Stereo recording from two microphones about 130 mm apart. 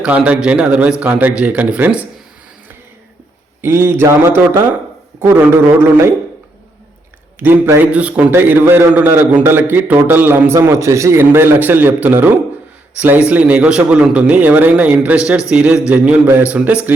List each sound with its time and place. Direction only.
0.0 s a man's voice: 10° right (ahead or behind)
3.6 s a man's voice: 20° right (ahead or behind)
7.3 s a man's voice: 15° right (ahead or behind)